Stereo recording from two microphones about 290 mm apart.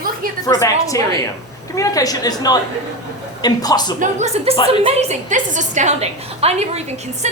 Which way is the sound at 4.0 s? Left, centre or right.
Right.